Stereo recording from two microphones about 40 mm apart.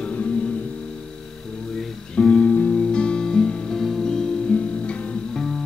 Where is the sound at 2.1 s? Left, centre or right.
Left.